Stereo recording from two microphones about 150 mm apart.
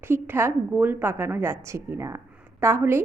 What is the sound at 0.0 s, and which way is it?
A woman's voice, 15° right (ahead or behind).